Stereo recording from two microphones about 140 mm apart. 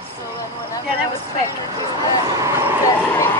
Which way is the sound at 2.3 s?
25° right (ahead or behind).